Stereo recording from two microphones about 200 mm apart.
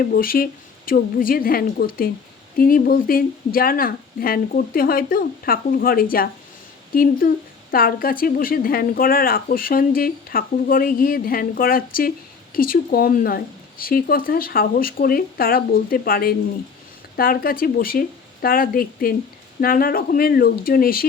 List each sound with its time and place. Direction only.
0.0 s speech: 45° left (ahead or behind)